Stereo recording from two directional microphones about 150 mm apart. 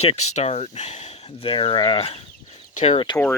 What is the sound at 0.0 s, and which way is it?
Speech, 45° left (ahead or behind).